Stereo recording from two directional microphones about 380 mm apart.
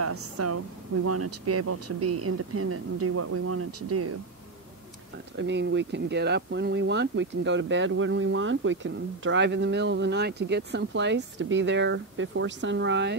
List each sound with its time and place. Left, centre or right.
0.0 s speech: right
5.4 s speech: right